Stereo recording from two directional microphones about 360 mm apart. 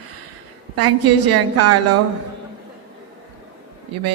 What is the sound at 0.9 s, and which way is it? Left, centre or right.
Speech, right.